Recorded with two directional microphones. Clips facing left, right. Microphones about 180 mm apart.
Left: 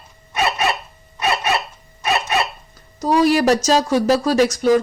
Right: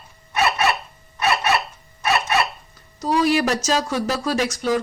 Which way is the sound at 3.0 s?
40° left (ahead or behind).